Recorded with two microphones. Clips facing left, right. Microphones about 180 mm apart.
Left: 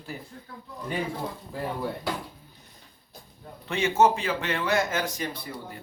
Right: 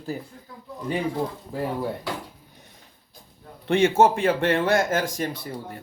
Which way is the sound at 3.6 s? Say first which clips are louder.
Right 4 dB; 50° right (ahead or behind).